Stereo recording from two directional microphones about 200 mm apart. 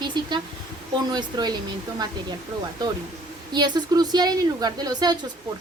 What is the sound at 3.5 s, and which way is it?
Speech, 20° right (ahead or behind).